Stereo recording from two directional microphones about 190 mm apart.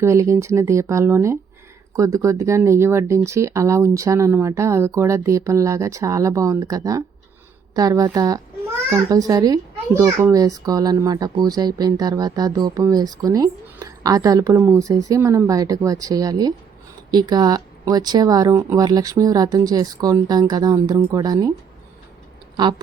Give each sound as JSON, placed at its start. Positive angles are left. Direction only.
{"t": 0.0, "sound": "a child's voice", "side_deg": -15}